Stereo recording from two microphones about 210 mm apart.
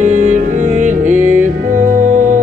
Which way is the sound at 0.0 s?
35° right (ahead or behind).